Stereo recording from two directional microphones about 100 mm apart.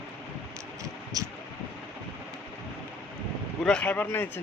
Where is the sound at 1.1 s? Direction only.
35° right (ahead or behind).